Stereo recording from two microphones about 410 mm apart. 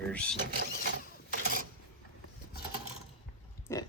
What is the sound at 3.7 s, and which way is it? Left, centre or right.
Pig, centre.